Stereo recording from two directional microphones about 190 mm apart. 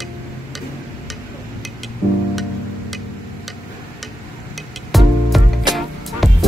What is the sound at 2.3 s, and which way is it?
Music, centre (ahead or behind).